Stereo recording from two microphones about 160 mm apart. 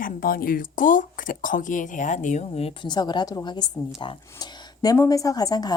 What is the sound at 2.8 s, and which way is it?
A woman's voice, 25° left (ahead or behind).